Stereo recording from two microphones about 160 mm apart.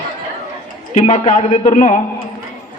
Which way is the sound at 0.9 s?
40° left (ahead or behind).